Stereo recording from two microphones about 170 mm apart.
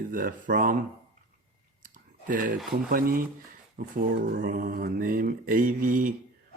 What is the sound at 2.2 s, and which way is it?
A man's voice, 55° right (ahead or behind).